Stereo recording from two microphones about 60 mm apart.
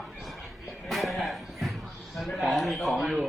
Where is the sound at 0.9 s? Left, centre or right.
Centre.